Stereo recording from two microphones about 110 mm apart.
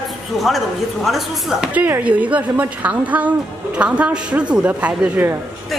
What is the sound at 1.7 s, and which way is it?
A man's voice, 15° right (ahead or behind).